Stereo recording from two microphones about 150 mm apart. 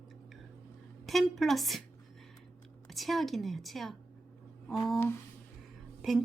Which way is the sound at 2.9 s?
Centre (ahead or behind).